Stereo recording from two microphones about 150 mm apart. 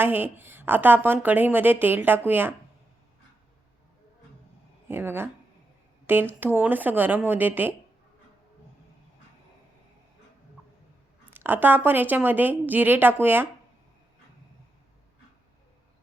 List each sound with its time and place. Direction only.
0.0 s a woman's voice: 15° right (ahead or behind)
4.9 s a woman's voice: 15° right (ahead or behind)
11.3 s a woman's voice: 15° right (ahead or behind)